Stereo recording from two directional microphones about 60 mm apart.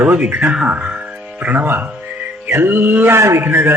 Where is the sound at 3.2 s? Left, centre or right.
Right.